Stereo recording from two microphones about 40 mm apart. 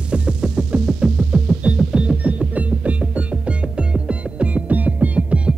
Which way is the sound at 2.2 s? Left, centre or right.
Right.